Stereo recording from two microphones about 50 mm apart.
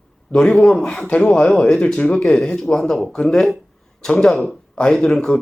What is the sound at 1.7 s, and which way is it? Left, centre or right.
Speech, centre.